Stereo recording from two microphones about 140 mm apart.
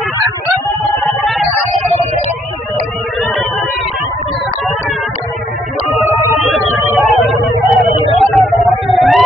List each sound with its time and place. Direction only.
1.0 s music: centre (ahead or behind)
6.4 s music: centre (ahead or behind)
8.2 s a sound: centre (ahead or behind)